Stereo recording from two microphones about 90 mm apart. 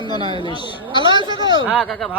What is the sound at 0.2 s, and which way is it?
Speech, 75° right (ahead or behind).